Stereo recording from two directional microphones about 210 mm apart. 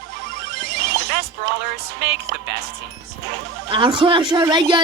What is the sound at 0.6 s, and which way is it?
Music, 50° right (ahead or behind).